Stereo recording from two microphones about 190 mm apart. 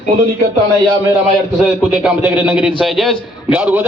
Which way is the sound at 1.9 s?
5° right (ahead or behind).